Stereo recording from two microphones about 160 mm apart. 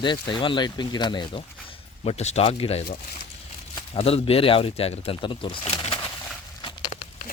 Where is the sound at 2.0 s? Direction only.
40° left (ahead or behind).